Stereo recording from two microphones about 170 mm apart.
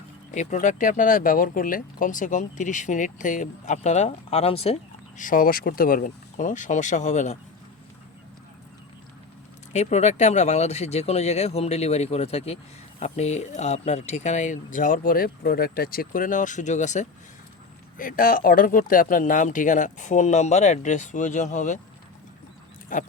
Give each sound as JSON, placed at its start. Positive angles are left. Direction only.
{"t": 0.3, "sound": "speech", "side_deg": 45}
{"t": 9.7, "sound": "speech", "side_deg": 40}
{"t": 17.9, "sound": "speech", "side_deg": 55}
{"t": 22.9, "sound": "speech", "side_deg": 50}